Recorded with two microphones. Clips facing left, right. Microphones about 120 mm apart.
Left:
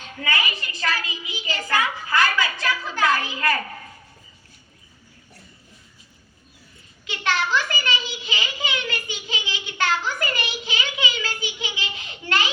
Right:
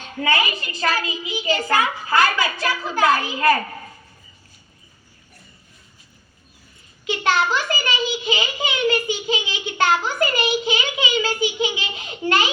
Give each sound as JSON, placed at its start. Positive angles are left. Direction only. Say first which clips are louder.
{"t": 0.2, "sound": "a child's voice", "louder": "right 5 dB", "side_deg": -25}
{"t": 7.3, "sound": "a child's voice", "louder": "right 3 dB", "side_deg": -20}